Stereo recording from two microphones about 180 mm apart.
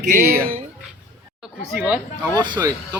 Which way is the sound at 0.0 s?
45° right (ahead or behind).